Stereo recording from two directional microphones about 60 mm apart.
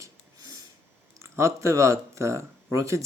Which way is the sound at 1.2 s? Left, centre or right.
Right.